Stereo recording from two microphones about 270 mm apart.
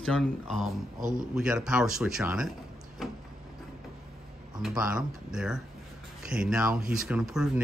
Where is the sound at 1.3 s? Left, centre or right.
Centre.